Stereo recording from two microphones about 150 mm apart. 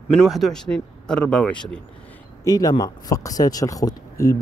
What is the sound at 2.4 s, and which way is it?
Speech, 25° left (ahead or behind).